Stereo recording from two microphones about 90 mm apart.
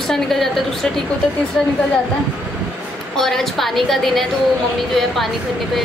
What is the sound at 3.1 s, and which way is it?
A woman's voice, 5° left (ahead or behind).